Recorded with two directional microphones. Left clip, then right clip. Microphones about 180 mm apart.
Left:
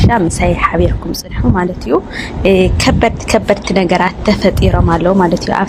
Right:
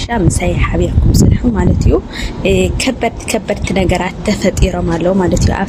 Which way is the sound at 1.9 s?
Centre (ahead or behind).